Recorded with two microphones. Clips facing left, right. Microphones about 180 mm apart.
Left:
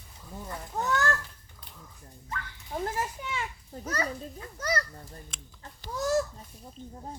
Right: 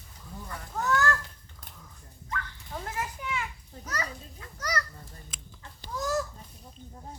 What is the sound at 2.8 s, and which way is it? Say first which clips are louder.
A child's voice: left 3 dB; 30° left (ahead or behind).